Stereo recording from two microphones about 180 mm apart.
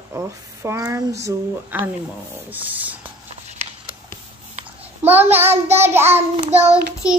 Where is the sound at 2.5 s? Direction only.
10° right (ahead or behind).